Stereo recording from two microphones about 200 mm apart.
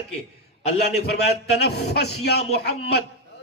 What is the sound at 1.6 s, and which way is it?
Speech, 55° left (ahead or behind).